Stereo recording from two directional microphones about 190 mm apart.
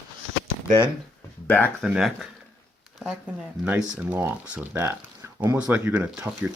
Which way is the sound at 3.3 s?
5° right (ahead or behind).